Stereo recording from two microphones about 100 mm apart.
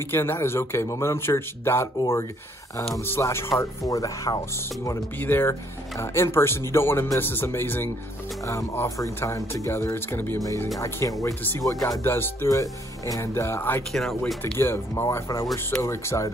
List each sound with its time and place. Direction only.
0.1 s speech: 25° left (ahead or behind)
3.1 s speech: 25° left (ahead or behind)
5.2 s speech: 20° left (ahead or behind); by 12.0 s 35° left (ahead or behind)
12.0 s speech: 25° left (ahead or behind)
12.4 s speech: 35° left (ahead or behind)
13.9 s speech: 5° left (ahead or behind)
14.4 s speech: 25° left (ahead or behind)